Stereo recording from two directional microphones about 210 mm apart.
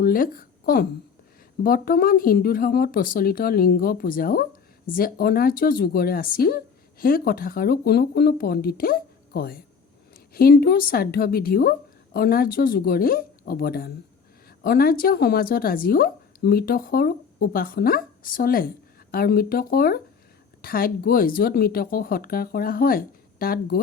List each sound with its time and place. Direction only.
0.0 s a woman's voice: 45° left (ahead or behind)